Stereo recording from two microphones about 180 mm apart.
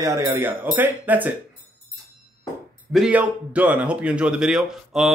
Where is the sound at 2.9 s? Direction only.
5° right (ahead or behind).